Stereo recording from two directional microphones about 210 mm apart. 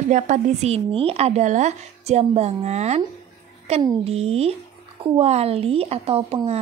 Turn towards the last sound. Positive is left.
turn(degrees=-30)  # may be behind; listen again after turning